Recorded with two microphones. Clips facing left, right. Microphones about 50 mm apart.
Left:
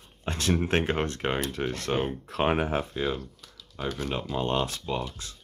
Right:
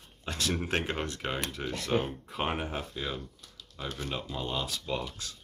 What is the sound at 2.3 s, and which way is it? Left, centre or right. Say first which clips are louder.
Speech: left 8 dB; left.